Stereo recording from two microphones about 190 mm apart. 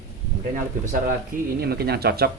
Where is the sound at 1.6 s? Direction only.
55° right (ahead or behind).